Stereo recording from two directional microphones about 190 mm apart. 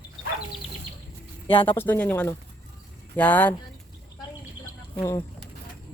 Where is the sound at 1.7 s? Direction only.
10° left (ahead or behind).